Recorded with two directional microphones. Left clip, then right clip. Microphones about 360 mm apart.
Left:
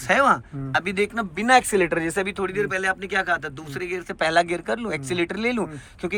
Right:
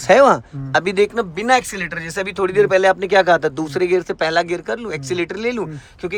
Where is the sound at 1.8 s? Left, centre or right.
Centre.